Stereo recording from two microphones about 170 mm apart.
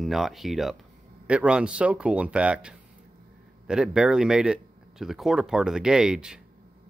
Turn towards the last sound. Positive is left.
turn(degrees=-5)  # may be behind; listen again after turning